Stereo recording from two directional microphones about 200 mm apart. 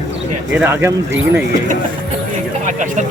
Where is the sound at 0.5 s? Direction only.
10° right (ahead or behind).